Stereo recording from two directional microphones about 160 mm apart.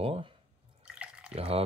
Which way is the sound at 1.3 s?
40° right (ahead or behind).